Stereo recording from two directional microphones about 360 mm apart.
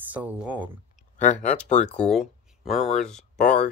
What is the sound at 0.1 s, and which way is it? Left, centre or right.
Speech, centre.